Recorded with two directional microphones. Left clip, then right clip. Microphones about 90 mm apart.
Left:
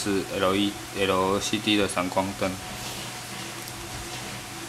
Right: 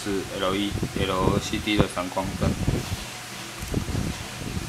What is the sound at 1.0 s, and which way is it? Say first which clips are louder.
Speech: left 2 dB; 25° left (ahead or behind).